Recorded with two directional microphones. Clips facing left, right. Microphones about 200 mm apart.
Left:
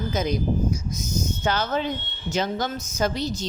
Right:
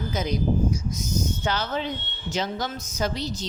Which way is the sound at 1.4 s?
50° left (ahead or behind).